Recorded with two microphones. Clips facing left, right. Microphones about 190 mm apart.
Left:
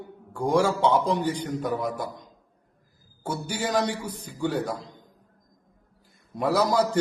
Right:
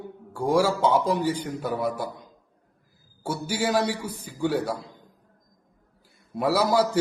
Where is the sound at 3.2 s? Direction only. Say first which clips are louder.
Right 3 dB; 10° right (ahead or behind).